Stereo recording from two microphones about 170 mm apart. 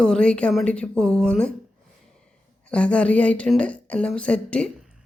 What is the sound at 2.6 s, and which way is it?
A woman's voice, 5° left (ahead or behind).